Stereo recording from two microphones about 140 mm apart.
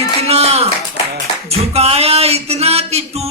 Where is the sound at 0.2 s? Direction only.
45° right (ahead or behind).